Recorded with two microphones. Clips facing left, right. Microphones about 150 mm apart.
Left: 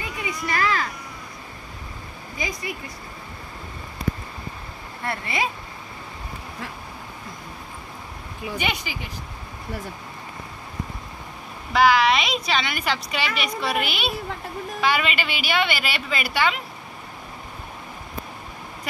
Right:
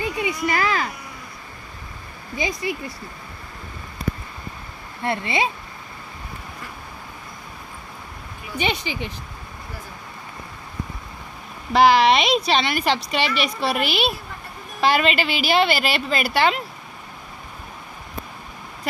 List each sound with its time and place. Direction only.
0.0 s a sound: 30° right (ahead or behind)
2.3 s speech: 25° right (ahead or behind)
5.0 s speech: 25° right (ahead or behind)
8.5 s speech: 25° right (ahead or behind)
11.7 s speech: 40° right (ahead or behind)